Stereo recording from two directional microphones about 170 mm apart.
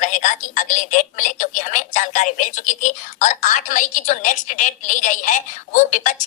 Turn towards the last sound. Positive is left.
turn(degrees=50)  # may be behind; listen again after turning